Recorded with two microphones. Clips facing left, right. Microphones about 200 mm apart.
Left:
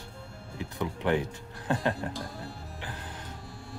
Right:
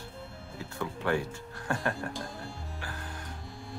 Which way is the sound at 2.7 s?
20° left (ahead or behind).